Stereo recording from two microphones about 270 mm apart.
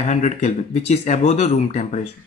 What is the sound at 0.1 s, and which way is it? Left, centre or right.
Speech, left.